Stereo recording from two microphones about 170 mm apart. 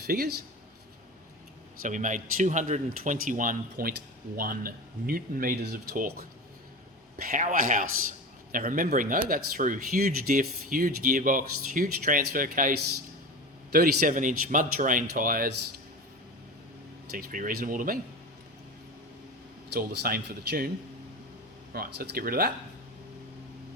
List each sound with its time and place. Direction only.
0.1 s speech: 60° right (ahead or behind)
1.8 s speech: 50° right (ahead or behind)
13.7 s speech: 60° right (ahead or behind)
17.1 s speech: 60° right (ahead or behind)
19.7 s speech: 65° right (ahead or behind)
21.7 s speech: 65° right (ahead or behind)